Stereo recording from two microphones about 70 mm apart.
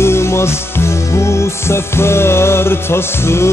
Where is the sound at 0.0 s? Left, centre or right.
Left.